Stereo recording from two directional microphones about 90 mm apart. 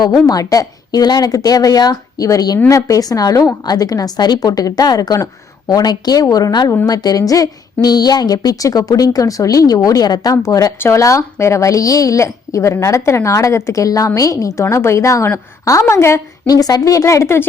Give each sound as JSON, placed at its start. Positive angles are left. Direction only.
{"t": 0.3, "sound": "a woman's voice", "side_deg": 40}
{"t": 16.5, "sound": "a woman's voice", "side_deg": 45}